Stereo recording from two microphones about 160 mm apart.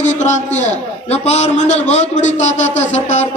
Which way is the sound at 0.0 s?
45° left (ahead or behind).